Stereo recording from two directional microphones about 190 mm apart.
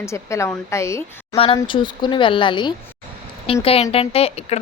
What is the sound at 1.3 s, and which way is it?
Speech, 30° left (ahead or behind).